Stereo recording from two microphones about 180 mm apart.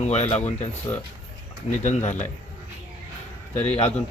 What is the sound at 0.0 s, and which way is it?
Speech, 40° left (ahead or behind).